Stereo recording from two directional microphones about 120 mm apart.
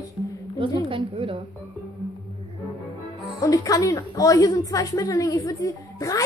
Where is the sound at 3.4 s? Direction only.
30° left (ahead or behind).